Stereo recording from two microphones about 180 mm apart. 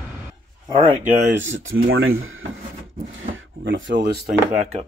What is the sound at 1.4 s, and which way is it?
Speech, 90° right.